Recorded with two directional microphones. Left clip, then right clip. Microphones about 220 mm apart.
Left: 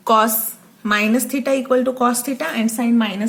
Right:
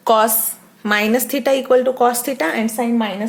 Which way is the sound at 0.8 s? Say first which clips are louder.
Right 1 dB; 30° right (ahead or behind).